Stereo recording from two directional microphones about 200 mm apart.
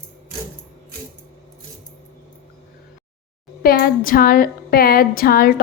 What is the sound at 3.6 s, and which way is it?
A woman's voice, 50° left (ahead or behind).